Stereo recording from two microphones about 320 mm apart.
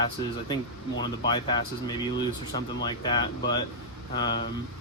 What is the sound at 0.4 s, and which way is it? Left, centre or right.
Speech, centre.